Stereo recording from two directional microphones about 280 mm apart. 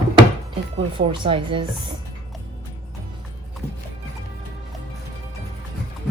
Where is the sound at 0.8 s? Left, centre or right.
Centre.